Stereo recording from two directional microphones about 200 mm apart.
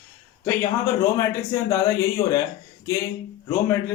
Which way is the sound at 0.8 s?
15° left (ahead or behind).